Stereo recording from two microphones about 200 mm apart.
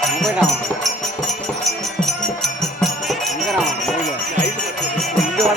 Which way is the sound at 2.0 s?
Centre (ahead or behind).